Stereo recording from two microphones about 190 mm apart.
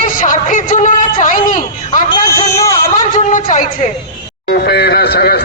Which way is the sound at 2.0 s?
20° left (ahead or behind).